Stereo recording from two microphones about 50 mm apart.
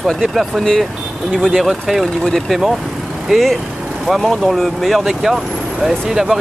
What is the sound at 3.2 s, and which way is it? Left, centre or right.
Speech, centre.